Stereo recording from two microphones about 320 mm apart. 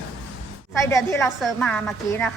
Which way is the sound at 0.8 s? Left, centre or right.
Centre.